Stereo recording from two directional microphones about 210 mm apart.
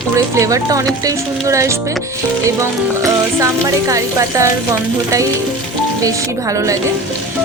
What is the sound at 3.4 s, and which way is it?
Speech, 15° right (ahead or behind).